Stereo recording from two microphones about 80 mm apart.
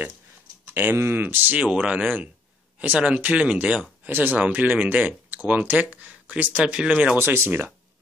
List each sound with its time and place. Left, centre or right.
0.7 s speech: right
7.2 s speech: right